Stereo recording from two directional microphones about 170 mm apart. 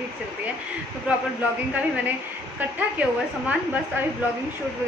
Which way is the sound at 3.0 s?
10° right (ahead or behind).